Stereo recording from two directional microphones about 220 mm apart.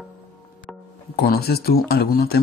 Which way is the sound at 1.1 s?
45° left (ahead or behind).